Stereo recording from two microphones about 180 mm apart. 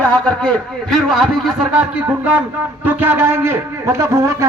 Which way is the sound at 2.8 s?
10° right (ahead or behind).